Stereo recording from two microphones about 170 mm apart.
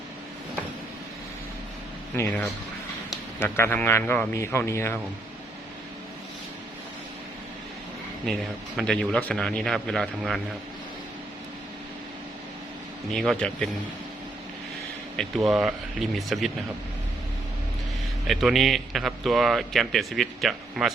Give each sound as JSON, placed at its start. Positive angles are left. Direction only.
{"t": 2.1, "sound": "a man's voice", "side_deg": 10}
{"t": 8.3, "sound": "a man's voice", "side_deg": 5}
{"t": 13.1, "sound": "a man's voice", "side_deg": 5}
{"t": 15.1, "sound": "a man's voice", "side_deg": 0}
{"t": 18.3, "sound": "a man's voice", "side_deg": 0}